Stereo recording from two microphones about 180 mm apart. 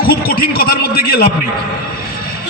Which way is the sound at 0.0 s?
55° left (ahead or behind).